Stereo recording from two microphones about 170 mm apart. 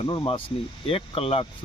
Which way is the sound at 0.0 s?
30° left (ahead or behind).